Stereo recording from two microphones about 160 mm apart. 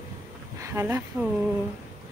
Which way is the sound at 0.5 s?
15° right (ahead or behind).